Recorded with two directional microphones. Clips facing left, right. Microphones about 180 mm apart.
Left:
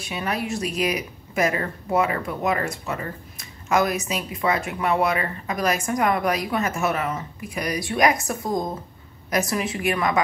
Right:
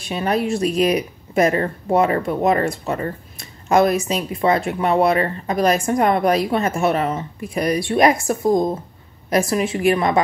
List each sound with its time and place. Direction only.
0.0 s a woman's voice: 35° right (ahead or behind)